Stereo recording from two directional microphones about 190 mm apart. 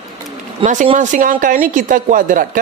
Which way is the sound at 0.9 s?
40° right (ahead or behind).